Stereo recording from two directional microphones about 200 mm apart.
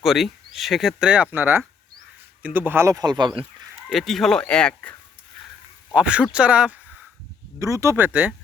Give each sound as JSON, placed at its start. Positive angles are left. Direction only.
{"t": 0.0, "sound": "speech", "side_deg": 0}
{"t": 3.8, "sound": "speech", "side_deg": 0}
{"t": 5.9, "sound": "speech", "side_deg": -5}